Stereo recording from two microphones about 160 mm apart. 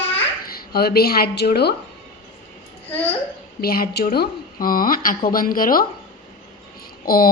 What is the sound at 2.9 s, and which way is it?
Speech, 10° left (ahead or behind).